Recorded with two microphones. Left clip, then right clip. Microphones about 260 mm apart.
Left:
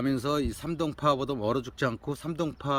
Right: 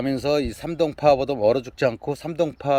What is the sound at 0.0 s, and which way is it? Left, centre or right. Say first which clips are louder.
Speech: right 6 dB; centre.